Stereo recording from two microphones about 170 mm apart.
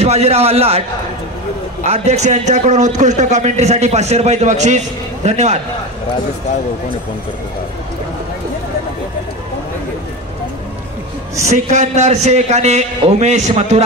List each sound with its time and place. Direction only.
0.0 s a man's voice: 40° right (ahead or behind)
11.4 s a man's voice: 40° right (ahead or behind)